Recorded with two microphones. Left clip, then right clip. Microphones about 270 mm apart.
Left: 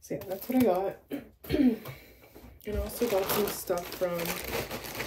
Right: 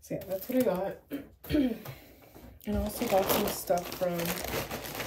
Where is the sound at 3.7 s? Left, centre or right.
Centre.